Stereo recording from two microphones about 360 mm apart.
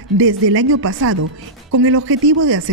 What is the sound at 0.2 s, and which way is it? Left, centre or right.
Speech, right.